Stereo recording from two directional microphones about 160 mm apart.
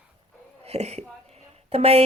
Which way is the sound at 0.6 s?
45° right (ahead or behind).